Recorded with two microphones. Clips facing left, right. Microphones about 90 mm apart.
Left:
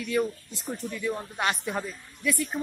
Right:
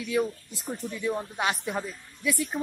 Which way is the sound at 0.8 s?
20° right (ahead or behind).